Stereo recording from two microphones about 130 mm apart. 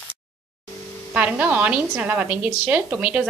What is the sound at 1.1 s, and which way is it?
A woman's voice, 10° right (ahead or behind).